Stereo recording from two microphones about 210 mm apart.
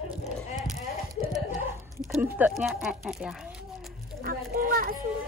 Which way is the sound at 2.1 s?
5° right (ahead or behind).